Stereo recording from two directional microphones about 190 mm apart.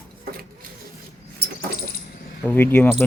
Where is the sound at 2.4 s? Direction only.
10° left (ahead or behind).